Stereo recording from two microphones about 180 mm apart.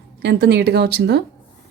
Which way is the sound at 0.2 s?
65° right (ahead or behind).